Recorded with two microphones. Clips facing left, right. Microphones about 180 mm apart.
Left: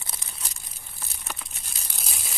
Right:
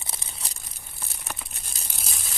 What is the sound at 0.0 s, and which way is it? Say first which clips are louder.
Crumpling: right 1 dB; 25° right (ahead or behind).